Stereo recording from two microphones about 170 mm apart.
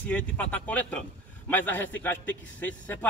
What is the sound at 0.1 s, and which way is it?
A man's voice, 10° left (ahead or behind).